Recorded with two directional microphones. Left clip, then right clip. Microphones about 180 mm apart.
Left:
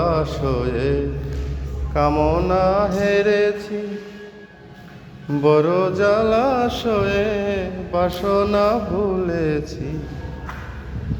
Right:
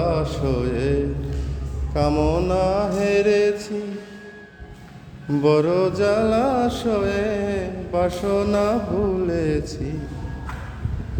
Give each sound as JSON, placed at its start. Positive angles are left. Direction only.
{"t": 0.0, "sound": "mantra", "side_deg": -15}
{"t": 1.9, "sound": "music", "side_deg": -25}
{"t": 5.3, "sound": "music", "side_deg": -30}